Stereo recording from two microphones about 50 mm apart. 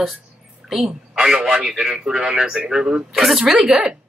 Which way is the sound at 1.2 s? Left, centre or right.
Centre.